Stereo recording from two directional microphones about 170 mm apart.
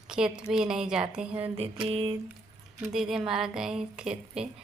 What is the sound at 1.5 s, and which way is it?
Mantra, 35° right (ahead or behind).